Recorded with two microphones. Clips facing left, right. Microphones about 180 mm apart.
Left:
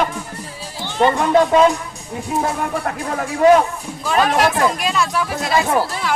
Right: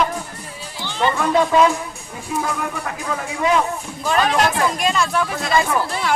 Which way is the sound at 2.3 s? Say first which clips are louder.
Left 3 dB; 45° left (ahead or behind).